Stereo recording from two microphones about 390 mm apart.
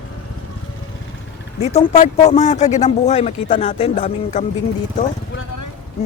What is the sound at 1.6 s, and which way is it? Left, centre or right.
Speech, centre.